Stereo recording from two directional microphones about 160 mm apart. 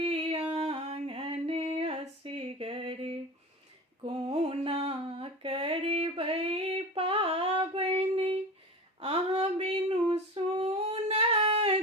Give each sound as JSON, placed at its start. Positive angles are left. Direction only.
{"t": 0.0, "sound": "a sound", "side_deg": -35}
{"t": 4.0, "sound": "mantra", "side_deg": -40}
{"t": 9.0, "sound": "female singing", "side_deg": -40}